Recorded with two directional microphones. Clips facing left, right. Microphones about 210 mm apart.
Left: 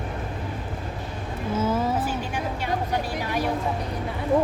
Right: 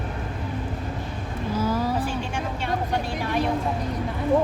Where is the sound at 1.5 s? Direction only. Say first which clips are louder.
Left 1 dB; 25° left (ahead or behind).